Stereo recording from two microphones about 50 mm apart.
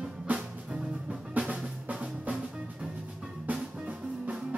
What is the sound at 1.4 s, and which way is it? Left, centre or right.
Drum, centre.